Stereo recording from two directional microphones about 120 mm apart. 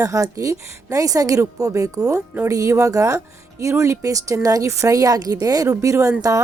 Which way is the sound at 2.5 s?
25° right (ahead or behind).